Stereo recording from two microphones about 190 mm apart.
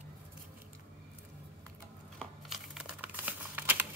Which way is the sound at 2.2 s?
Centre (ahead or behind).